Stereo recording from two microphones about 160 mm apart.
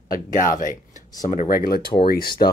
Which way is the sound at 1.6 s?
65° left (ahead or behind).